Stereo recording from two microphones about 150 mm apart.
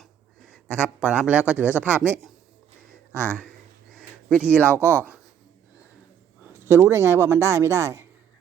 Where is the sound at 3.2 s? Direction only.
10° left (ahead or behind).